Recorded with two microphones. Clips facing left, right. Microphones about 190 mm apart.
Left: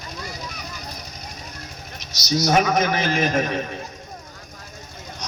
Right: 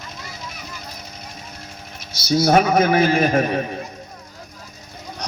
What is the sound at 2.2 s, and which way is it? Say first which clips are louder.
A man's voice: right 4 dB; 55° right (ahead or behind).